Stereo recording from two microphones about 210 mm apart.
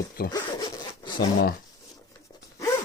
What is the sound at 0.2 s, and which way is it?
Speech, 45° left (ahead or behind).